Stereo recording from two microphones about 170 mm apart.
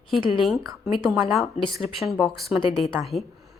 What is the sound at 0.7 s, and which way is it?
A woman's voice, centre (ahead or behind).